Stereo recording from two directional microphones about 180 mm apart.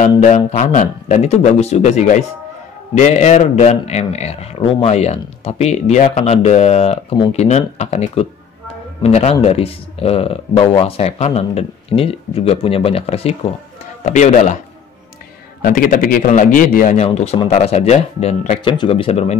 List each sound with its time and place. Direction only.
0.2 s a man's voice: 40° left (ahead or behind)
15.6 s a man's voice: 50° left (ahead or behind)
17.0 s a man's voice: 35° left (ahead or behind)
18.6 s a man's voice: 30° left (ahead or behind)